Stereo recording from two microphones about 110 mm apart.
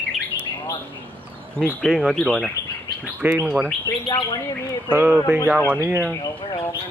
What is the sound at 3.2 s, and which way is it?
Speech, 15° right (ahead or behind).